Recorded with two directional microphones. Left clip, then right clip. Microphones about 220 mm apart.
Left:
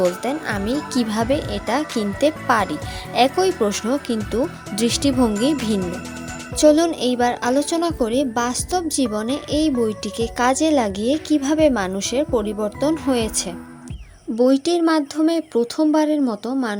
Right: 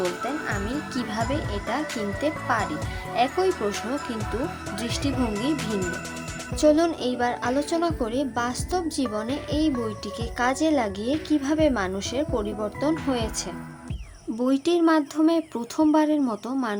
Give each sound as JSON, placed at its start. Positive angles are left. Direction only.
{"t": 0.2, "sound": "speech", "side_deg": 35}
{"t": 6.6, "sound": "a woman's voice", "side_deg": 25}